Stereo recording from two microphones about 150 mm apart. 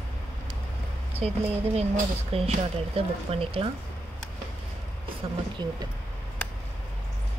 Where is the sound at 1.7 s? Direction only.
45° right (ahead or behind).